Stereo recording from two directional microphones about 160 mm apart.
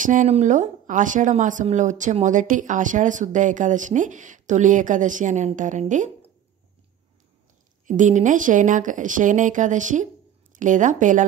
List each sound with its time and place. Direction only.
0.0 s speech: 50° right (ahead or behind)
7.8 s speech: 50° right (ahead or behind)